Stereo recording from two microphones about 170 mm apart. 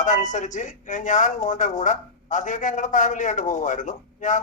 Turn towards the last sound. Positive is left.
turn(degrees=45)  # may be behind; listen again after turning